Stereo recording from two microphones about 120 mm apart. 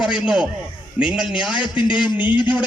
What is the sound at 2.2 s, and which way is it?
Speech, 40° left (ahead or behind).